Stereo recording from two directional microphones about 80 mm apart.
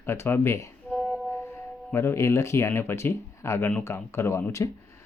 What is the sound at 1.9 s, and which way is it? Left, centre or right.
Speech, left.